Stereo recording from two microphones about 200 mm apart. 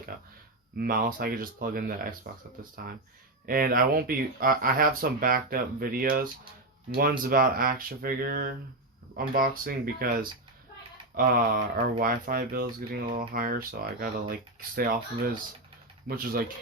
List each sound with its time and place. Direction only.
0.1 s a sound: 45° right (ahead or behind)
0.8 s speech: 45° right (ahead or behind)
3.4 s speech: 45° right (ahead or behind)
7.3 s speech: 45° right (ahead or behind)
16.0 s speech: 50° right (ahead or behind)